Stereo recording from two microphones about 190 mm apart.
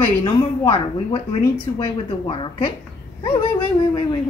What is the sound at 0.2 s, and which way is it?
Speech, 25° left (ahead or behind).